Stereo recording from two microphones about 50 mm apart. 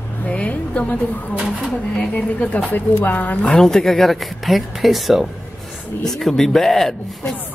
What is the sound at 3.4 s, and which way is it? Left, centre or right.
Speech, centre.